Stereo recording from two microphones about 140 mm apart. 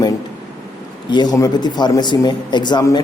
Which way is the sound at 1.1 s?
30° left (ahead or behind).